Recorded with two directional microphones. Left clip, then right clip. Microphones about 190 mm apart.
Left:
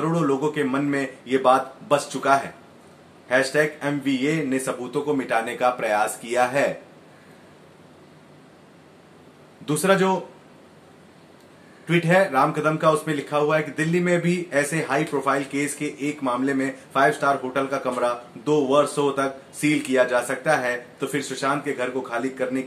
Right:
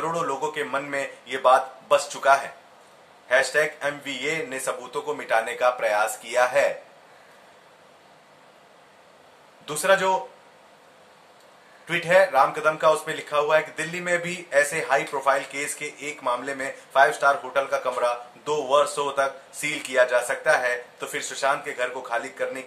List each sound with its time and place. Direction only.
0.1 s speech: 5° right (ahead or behind)
9.7 s speech: centre (ahead or behind)
11.8 s speech: centre (ahead or behind)